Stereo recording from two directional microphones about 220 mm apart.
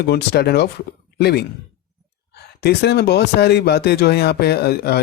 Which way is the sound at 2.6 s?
50° left (ahead or behind).